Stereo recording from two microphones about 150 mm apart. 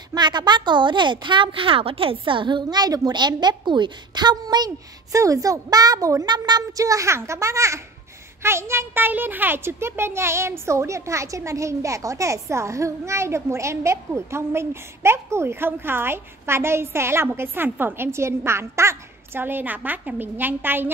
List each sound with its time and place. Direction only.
0.1 s a woman's voice: 30° right (ahead or behind); by 20.9 s 15° right (ahead or behind)